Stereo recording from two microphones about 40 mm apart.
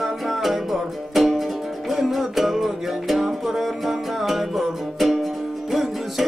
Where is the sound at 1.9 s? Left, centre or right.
Centre.